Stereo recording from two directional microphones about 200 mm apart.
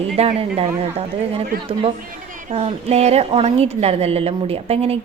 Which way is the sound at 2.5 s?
30° right (ahead or behind).